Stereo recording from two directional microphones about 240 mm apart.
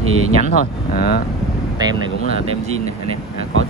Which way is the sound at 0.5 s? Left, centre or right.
Left.